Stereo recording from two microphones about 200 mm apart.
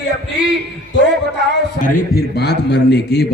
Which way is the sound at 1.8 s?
55° left (ahead or behind).